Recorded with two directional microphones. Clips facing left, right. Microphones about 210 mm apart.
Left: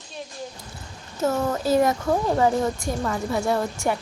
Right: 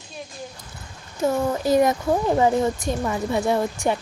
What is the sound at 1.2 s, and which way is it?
A woman's voice, 15° right (ahead or behind).